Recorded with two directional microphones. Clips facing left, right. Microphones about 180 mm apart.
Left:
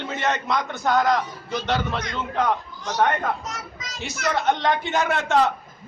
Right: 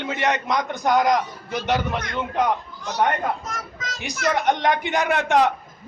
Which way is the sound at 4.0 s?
15° right (ahead or behind).